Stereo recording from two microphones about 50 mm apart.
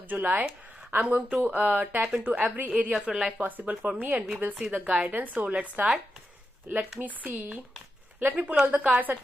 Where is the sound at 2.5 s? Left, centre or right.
Right.